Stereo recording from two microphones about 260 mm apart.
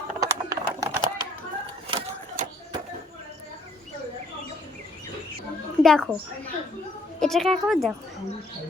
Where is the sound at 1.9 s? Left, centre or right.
Right.